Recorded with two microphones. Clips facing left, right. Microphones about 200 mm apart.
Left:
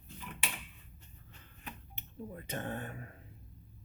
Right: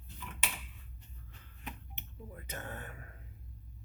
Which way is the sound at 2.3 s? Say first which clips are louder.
Left 5 dB; 30° left (ahead or behind).